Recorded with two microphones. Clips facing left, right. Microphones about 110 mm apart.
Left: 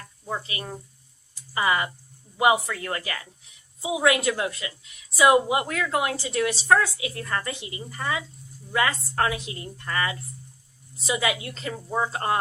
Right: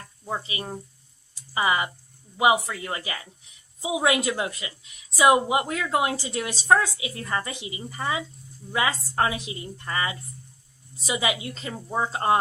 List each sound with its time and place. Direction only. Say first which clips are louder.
0.3 s a woman's voice: right 1 dB; 20° right (ahead or behind)